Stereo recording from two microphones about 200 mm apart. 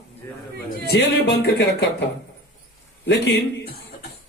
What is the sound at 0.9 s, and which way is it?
Speech, 55° left (ahead or behind).